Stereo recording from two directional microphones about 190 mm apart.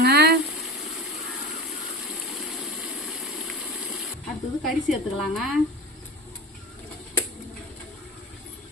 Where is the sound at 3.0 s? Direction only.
Centre (ahead or behind).